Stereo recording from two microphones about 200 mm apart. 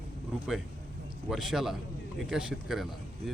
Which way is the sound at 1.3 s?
Centre (ahead or behind).